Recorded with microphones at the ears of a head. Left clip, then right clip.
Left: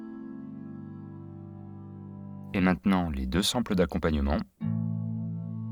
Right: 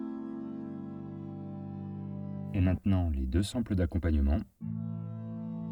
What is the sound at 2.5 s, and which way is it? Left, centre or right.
Speech, left.